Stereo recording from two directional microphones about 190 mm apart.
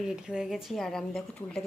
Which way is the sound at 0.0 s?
5° right (ahead or behind).